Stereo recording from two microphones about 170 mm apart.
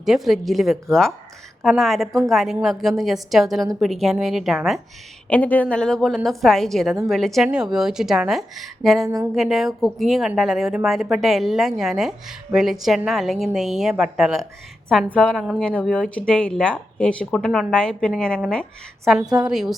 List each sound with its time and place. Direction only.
0.0 s a woman's voice: centre (ahead or behind)
5.3 s a woman's voice: 10° left (ahead or behind)
9.0 s a sound: 20° right (ahead or behind)
9.3 s a woman's voice: centre (ahead or behind)